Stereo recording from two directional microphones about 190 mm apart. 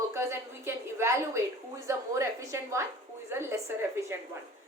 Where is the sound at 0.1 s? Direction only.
15° right (ahead or behind).